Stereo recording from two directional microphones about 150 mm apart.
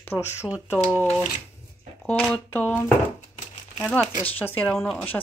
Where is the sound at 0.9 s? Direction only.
10° left (ahead or behind).